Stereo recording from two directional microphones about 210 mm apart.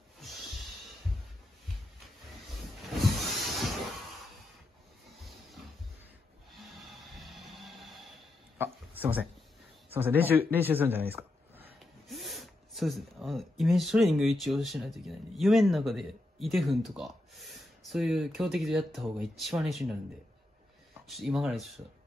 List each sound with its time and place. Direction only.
2.8 s a sound: centre (ahead or behind)
6.7 s music: centre (ahead or behind)
8.5 s speech: 10° right (ahead or behind)
21.1 s speech: centre (ahead or behind)